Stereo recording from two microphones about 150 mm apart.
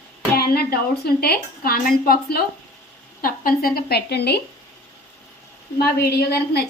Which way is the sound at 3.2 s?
75° left (ahead or behind).